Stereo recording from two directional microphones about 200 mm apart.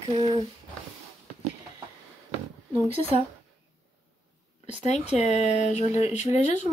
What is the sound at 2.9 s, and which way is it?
Speech, 30° right (ahead or behind).